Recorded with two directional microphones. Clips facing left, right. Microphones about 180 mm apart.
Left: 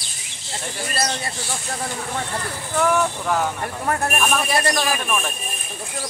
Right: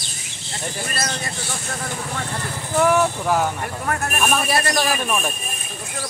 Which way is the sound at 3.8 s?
30° left (ahead or behind).